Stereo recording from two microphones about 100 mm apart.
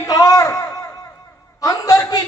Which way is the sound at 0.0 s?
35° left (ahead or behind).